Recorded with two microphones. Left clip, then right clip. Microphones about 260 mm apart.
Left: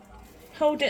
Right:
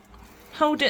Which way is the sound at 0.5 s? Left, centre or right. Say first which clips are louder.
Right 2 dB; right.